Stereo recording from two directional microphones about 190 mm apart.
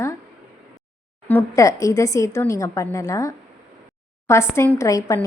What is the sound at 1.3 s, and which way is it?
A woman's voice, 15° left (ahead or behind).